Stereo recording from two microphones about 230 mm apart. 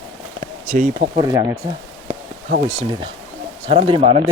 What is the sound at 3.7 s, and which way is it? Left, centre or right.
Speech, right.